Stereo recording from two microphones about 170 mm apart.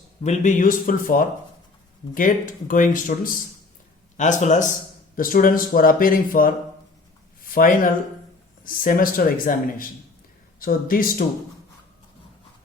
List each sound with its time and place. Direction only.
0.2 s speech: 45° left (ahead or behind)
7.4 s a sound: 55° left (ahead or behind)
8.6 s speech: 55° left (ahead or behind)